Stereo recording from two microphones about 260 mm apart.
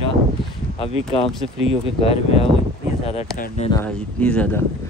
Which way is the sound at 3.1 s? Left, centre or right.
Left.